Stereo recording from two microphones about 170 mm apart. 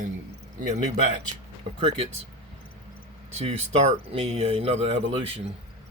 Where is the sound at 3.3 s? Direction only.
40° right (ahead or behind).